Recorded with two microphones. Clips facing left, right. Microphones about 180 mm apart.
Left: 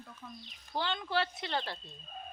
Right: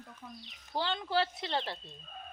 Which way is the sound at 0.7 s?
30° right (ahead or behind).